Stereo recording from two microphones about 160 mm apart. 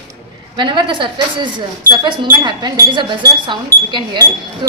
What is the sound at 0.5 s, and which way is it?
Speech, 30° right (ahead or behind).